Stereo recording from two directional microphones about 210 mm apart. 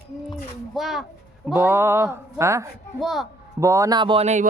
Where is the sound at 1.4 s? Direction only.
10° right (ahead or behind).